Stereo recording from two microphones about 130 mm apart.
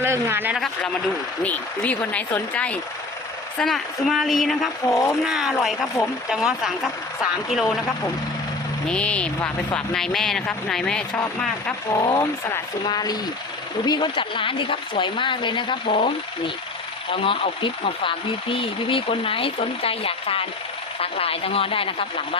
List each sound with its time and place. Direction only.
0.0 s speech: 20° right (ahead or behind)
1.5 s speech: 10° left (ahead or behind)
4.9 s speech: 25° left (ahead or behind)
5.2 s speech: 5° right (ahead or behind)
5.5 s speech: 5° left (ahead or behind)
6.3 s speech: 5° right (ahead or behind)
8.9 s speech: 10° left (ahead or behind)
11.9 s speech: 30° left (ahead or behind); by 22.4 s 45° left (ahead or behind)